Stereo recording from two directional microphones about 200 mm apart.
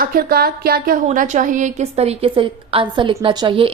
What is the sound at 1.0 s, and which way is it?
A woman's voice, 40° right (ahead or behind).